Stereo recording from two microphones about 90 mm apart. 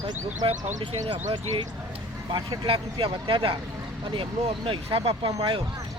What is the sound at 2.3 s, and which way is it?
Speech, 50° right (ahead or behind).